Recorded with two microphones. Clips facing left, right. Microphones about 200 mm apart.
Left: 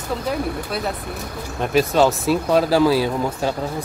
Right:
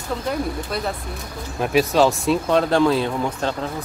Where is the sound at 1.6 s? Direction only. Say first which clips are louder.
Even; centre (ahead or behind).